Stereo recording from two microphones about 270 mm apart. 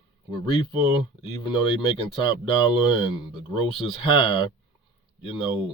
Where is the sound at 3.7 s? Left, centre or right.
Left.